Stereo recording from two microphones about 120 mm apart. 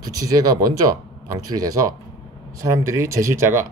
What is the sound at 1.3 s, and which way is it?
Speech, 30° right (ahead or behind).